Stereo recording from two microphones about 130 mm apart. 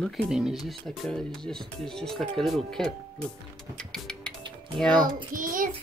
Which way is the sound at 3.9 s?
5° left (ahead or behind).